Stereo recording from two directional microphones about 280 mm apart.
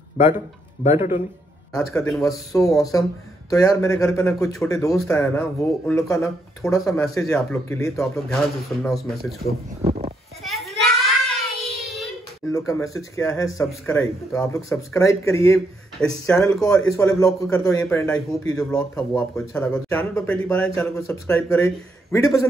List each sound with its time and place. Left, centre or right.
0.8 s speech: centre
1.7 s speech: centre
9.8 s a sound: right
10.4 s child singing: centre
12.4 s speech: centre